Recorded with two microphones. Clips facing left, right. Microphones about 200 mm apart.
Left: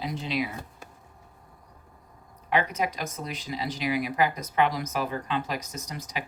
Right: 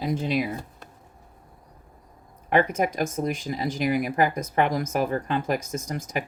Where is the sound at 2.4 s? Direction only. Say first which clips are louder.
Right 5 dB; 50° right (ahead or behind).